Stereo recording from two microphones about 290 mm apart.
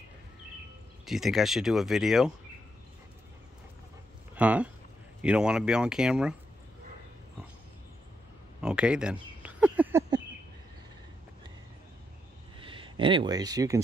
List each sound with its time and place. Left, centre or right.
1.0 s speech: centre
4.4 s speech: centre
8.5 s a sound: centre
12.5 s speech: centre